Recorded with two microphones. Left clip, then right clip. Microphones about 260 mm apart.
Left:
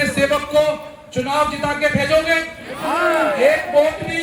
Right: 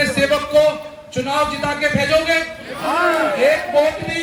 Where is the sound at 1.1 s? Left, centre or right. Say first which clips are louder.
Even; left.